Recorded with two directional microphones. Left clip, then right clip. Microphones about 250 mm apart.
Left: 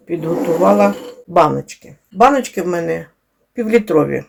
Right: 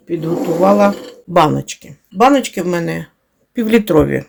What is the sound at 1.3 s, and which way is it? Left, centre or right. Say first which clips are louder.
Speech: even; right.